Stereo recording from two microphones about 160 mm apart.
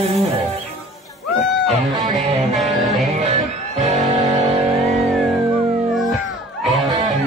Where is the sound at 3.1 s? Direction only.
40° right (ahead or behind).